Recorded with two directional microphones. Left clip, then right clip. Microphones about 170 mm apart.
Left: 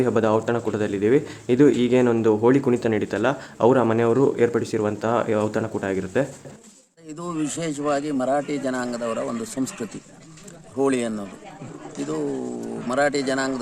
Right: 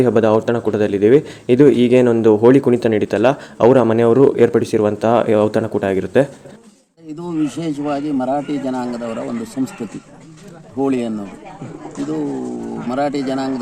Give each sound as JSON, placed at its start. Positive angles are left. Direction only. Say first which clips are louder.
{"t": 0.0, "sound": "speech", "louder": "right 7 dB", "side_deg": -20}
{"t": 7.2, "sound": "speech", "louder": "right 6 dB", "side_deg": 15}
{"t": 10.8, "sound": "speech", "louder": "right 3 dB", "side_deg": 15}
{"t": 12.9, "sound": "speech", "louder": "right 2 dB", "side_deg": 15}